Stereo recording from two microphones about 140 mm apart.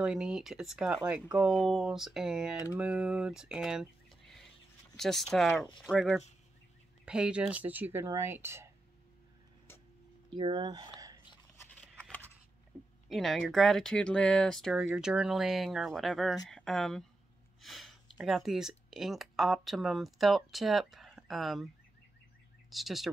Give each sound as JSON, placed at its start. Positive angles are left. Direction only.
{"t": 0.0, "sound": "speech", "side_deg": -5}
{"t": 10.3, "sound": "speech", "side_deg": -35}
{"t": 11.5, "sound": "a sound", "side_deg": 20}
{"t": 13.1, "sound": "speech", "side_deg": 0}
{"t": 22.7, "sound": "speech", "side_deg": 0}